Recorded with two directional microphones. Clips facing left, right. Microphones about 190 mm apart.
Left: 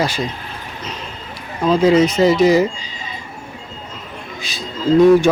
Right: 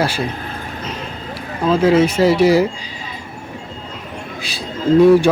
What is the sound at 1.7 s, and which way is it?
Speech, 5° right (ahead or behind).